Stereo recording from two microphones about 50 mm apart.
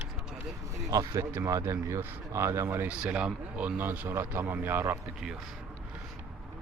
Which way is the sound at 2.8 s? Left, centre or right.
Right.